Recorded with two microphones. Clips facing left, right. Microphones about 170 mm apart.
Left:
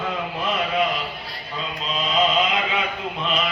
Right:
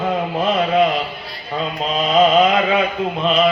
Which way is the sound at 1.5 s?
50° right (ahead or behind).